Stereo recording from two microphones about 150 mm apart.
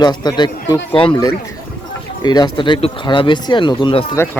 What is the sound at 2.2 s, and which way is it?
Speech, 30° left (ahead or behind).